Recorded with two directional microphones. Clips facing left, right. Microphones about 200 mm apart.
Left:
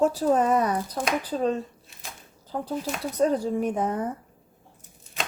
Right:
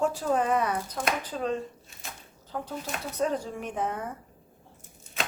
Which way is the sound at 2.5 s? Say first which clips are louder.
Left 5 dB; 30° left (ahead or behind).